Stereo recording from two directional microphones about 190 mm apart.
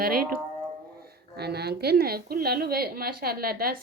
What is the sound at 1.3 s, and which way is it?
A woman's voice, 60° right (ahead or behind).